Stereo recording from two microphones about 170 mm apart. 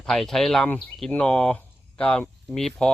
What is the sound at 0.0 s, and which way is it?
Speech, centre (ahead or behind).